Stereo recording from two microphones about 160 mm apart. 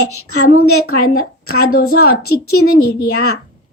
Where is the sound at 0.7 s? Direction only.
70° left (ahead or behind).